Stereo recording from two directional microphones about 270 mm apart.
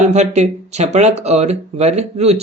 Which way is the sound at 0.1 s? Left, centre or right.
Right.